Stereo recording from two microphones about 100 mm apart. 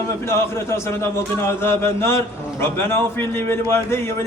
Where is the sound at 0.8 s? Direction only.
25° left (ahead or behind).